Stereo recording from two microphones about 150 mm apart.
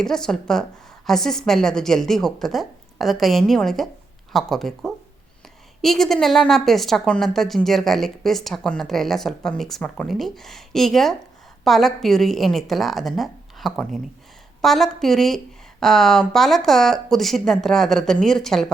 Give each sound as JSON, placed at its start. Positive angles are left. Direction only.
{"t": 0.0, "sound": "a woman's voice", "side_deg": 5}